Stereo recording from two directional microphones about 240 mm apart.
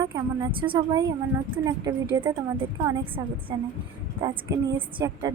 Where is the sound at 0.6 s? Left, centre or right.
Centre.